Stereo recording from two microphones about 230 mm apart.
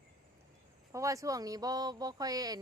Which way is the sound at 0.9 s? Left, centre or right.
Centre.